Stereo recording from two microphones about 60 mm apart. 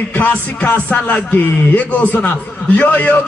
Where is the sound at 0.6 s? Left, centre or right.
Left.